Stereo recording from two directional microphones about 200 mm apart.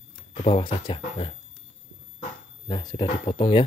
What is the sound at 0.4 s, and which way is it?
Speech, 30° left (ahead or behind).